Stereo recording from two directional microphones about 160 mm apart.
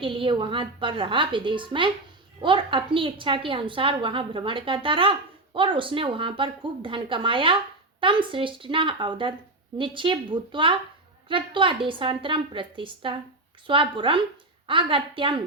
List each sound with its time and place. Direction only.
0.0 s a woman's voice: 30° right (ahead or behind)